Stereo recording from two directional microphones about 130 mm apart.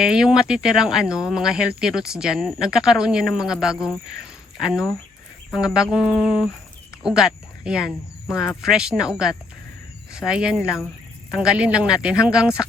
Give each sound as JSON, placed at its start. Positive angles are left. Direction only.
{"t": 0.0, "sound": "speech", "side_deg": -5}
{"t": 5.5, "sound": "speech", "side_deg": -5}
{"t": 10.6, "sound": "speech", "side_deg": 20}
{"t": 11.3, "sound": "speech", "side_deg": -5}